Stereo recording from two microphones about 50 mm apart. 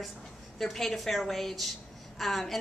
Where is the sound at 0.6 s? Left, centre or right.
Centre.